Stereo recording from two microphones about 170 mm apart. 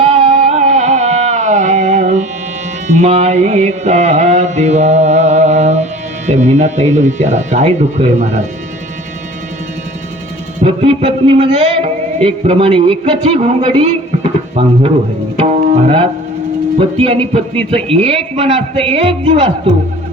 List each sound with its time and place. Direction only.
0.0 s music: 40° right (ahead or behind)
10.6 s music: 35° right (ahead or behind)
15.4 s tabla: 30° right (ahead or behind)
16.7 s a man's voice: 35° right (ahead or behind)